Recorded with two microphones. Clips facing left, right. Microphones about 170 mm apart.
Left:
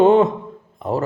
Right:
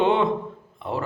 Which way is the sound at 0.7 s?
40° left (ahead or behind).